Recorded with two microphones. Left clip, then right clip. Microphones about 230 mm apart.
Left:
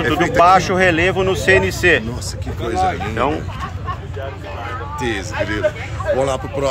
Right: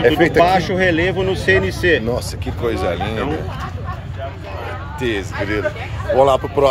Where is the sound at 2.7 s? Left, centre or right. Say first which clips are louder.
Left 4 dB; centre.